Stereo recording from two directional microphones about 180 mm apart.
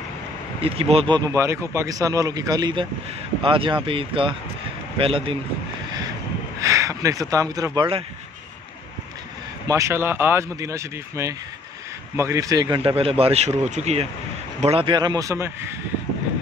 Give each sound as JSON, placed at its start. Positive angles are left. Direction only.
{"t": 0.6, "sound": "speech", "side_deg": -30}
{"t": 6.6, "sound": "speech", "side_deg": -15}
{"t": 9.7, "sound": "speech", "side_deg": -15}